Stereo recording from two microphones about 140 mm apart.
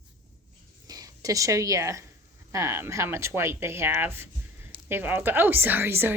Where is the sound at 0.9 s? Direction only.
25° right (ahead or behind).